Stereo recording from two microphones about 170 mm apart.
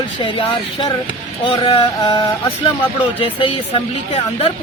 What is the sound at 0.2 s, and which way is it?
Speech, 30° left (ahead or behind).